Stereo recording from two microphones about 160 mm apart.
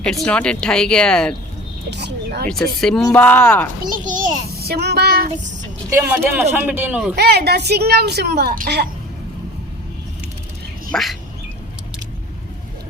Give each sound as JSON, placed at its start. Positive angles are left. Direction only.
{"t": 0.0, "sound": "speech", "side_deg": 5}
{"t": 1.9, "sound": "speech", "side_deg": -90}
{"t": 2.5, "sound": "speech", "side_deg": 5}
{"t": 4.0, "sound": "a child's voice", "side_deg": -55}
{"t": 4.5, "sound": "child singing", "side_deg": -80}
{"t": 6.0, "sound": "a man's voice", "side_deg": -10}
{"t": 7.2, "sound": "a woman's voice", "side_deg": -90}
{"t": 10.9, "sound": "speech", "side_deg": 0}